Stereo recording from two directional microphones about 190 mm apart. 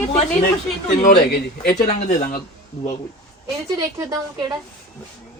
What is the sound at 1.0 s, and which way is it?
Speech, 50° left (ahead or behind).